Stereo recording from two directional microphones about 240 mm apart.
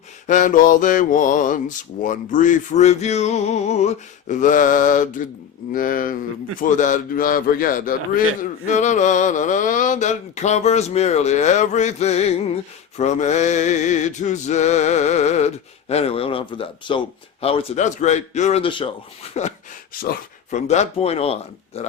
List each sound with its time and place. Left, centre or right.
0.3 s a man's voice: left